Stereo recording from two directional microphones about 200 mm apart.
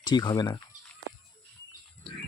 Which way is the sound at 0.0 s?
20° left (ahead or behind).